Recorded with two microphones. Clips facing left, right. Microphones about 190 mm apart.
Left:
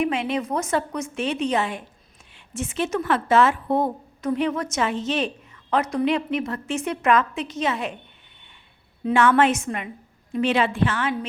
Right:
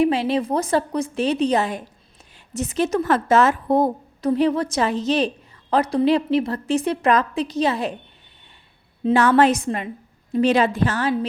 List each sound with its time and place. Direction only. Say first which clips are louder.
0.0 s a woman's voice: right 5 dB; 35° right (ahead or behind)
9.1 s a woman's voice: right 2 dB; 35° right (ahead or behind)